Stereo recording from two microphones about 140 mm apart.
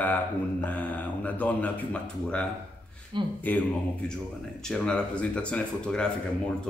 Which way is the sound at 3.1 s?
35° right (ahead or behind).